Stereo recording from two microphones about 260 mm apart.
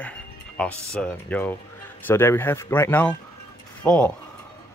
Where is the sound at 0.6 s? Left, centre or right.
Centre.